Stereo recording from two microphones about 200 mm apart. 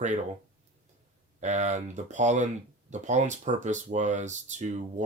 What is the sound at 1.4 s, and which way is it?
Speech, 35° right (ahead or behind).